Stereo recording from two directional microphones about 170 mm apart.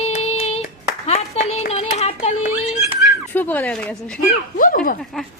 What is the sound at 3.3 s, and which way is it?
Speech, 10° left (ahead or behind).